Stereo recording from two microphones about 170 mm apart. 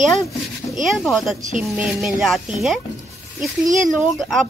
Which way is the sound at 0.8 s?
Centre (ahead or behind).